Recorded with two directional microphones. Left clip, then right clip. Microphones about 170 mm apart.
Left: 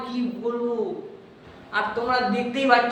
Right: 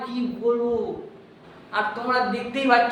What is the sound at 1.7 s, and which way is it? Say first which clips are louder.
A man's voice: even; centre (ahead or behind).